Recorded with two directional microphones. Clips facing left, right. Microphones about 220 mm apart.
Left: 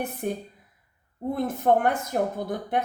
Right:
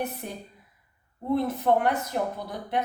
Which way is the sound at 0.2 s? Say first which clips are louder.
Left 8 dB; 55° left (ahead or behind).